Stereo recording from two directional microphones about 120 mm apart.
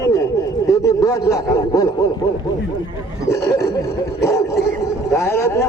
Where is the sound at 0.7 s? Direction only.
30° left (ahead or behind).